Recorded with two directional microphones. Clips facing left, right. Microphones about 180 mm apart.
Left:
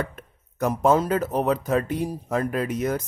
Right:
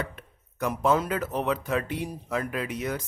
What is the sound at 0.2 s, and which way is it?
Speech, 45° left (ahead or behind).